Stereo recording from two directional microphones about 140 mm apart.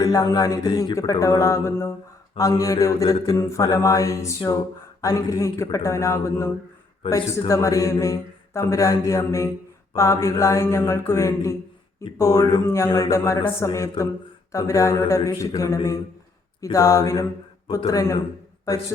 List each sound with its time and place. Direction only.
0.0 s speech: 25° left (ahead or behind)